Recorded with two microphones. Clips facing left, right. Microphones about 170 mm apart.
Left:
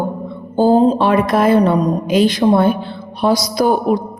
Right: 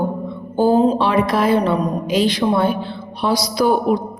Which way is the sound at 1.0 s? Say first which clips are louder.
Left 3 dB; 50° left (ahead or behind).